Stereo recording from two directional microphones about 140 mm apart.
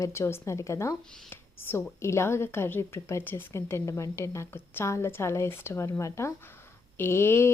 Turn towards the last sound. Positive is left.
turn(degrees=20)  # may be behind; listen again after turning